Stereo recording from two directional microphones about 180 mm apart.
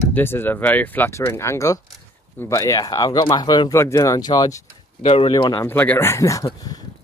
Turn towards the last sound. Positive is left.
turn(degrees=20)  # may be behind; listen again after turning